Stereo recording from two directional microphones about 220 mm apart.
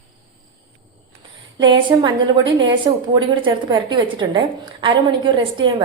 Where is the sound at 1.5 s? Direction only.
20° right (ahead or behind).